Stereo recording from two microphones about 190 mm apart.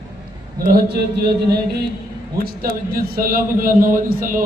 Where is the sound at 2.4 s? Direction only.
50° right (ahead or behind).